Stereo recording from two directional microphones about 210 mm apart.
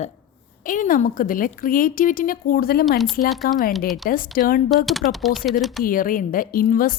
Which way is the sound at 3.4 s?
45° left (ahead or behind).